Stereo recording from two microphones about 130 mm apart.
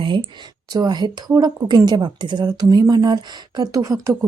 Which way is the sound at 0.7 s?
30° right (ahead or behind).